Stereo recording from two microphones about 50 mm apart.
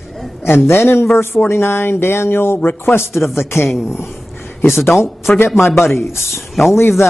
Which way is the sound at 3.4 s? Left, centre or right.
Left.